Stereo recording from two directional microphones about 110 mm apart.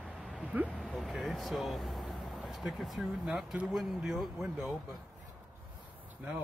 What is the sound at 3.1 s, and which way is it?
Speech, 5° right (ahead or behind).